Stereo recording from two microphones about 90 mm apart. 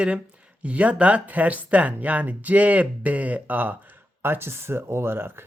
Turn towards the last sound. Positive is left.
turn(degrees=-25)  # may be behind; listen again after turning